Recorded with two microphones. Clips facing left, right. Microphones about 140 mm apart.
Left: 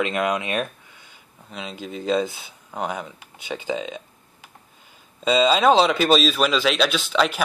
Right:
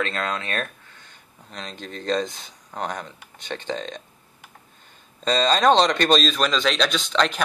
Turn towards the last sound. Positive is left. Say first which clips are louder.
# left 1 dB
turn(degrees=5)  # may be behind; listen again after turning